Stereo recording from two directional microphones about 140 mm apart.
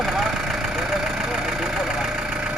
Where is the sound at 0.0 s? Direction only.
Centre (ahead or behind).